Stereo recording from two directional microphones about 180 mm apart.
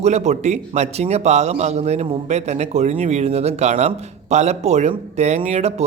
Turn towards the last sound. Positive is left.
turn(degrees=-35)  # may be behind; listen again after turning